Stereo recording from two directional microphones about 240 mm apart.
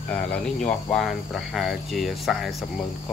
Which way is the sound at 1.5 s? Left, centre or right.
Centre.